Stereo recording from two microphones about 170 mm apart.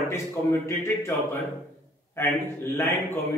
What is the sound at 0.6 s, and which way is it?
A man's voice, 15° left (ahead or behind).